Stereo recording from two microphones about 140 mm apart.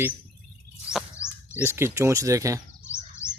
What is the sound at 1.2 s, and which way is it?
Bird, 20° left (ahead or behind).